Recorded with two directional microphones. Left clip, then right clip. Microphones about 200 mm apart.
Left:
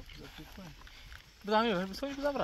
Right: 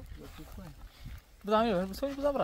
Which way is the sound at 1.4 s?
50° right (ahead or behind).